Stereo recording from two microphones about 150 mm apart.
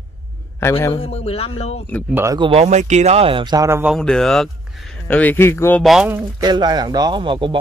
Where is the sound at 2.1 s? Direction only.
15° right (ahead or behind).